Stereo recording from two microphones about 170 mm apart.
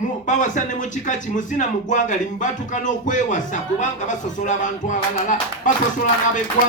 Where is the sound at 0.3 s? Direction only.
50° left (ahead or behind).